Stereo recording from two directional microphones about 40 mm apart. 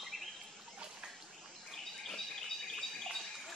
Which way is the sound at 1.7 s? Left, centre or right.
Centre.